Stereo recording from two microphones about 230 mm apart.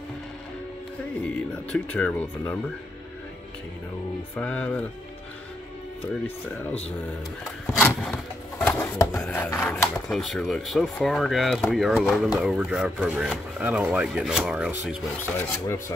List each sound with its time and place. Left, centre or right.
1.7 s speech: centre
4.4 s speech: centre
6.2 s speech: centre
7.7 s a sound: centre
9.2 s speech: centre
15.3 s speech: centre